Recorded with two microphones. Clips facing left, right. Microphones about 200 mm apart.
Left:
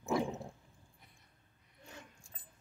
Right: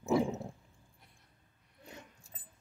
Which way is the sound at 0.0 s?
5° right (ahead or behind).